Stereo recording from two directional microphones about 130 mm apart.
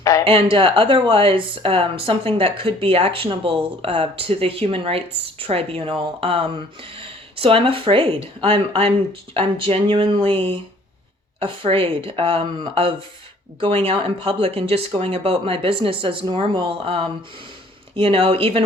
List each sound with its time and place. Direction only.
0.0 s a woman's voice: 25° left (ahead or behind)
0.5 s a woman's voice: 40° right (ahead or behind)
13.6 s a woman's voice: 45° right (ahead or behind)